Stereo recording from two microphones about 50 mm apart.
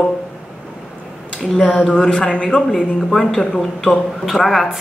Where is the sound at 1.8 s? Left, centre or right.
Centre.